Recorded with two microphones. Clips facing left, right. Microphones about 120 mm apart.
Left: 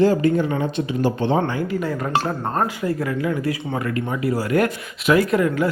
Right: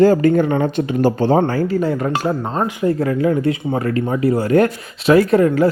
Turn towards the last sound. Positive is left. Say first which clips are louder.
# right 6 dB
turn(degrees=-35)  # may be behind; listen again after turning